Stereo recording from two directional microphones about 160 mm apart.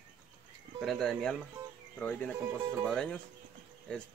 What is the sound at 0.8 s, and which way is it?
Speech, centre (ahead or behind).